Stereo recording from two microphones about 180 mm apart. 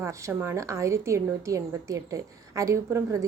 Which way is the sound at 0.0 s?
15° right (ahead or behind).